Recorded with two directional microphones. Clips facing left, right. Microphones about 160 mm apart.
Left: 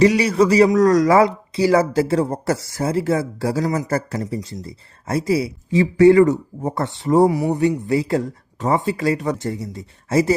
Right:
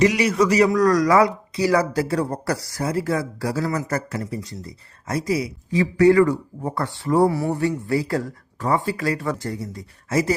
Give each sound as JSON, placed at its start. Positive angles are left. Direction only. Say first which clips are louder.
{"t": 0.0, "sound": "speech", "louder": "left 3 dB", "side_deg": 30}